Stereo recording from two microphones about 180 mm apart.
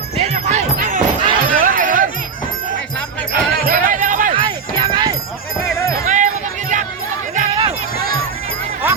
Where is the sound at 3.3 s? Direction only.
55° right (ahead or behind).